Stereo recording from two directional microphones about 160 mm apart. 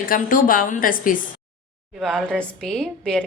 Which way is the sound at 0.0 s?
60° left (ahead or behind).